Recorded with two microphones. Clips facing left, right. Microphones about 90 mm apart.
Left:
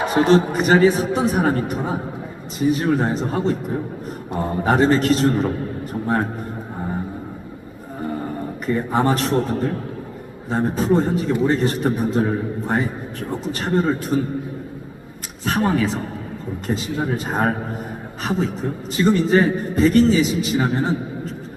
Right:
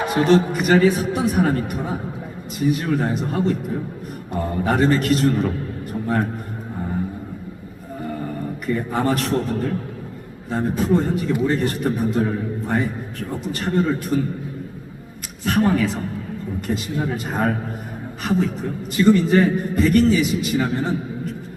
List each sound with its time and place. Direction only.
0.1 s a man's voice: 25° left (ahead or behind)
8.6 s a man's voice: 25° left (ahead or behind)
10.5 s a man's voice: 25° left (ahead or behind)
15.4 s a man's voice: 20° left (ahead or behind)